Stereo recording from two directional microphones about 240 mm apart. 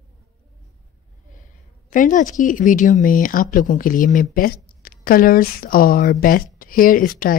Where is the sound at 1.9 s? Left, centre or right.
Left.